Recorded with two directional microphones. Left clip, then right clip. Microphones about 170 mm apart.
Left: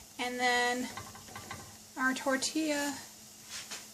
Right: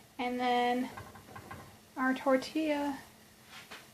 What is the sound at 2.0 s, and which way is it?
Speech, 5° left (ahead or behind).